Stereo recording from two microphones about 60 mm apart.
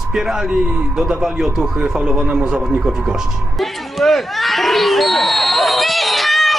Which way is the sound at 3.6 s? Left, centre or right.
Centre.